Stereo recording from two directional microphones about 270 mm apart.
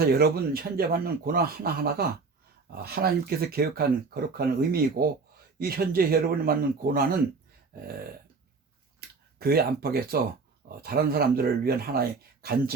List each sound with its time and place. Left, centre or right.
0.0 s speech: right
9.0 s a sound: right
10.8 s speech: right